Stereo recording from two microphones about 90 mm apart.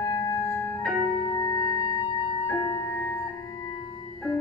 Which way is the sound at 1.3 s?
35° left (ahead or behind).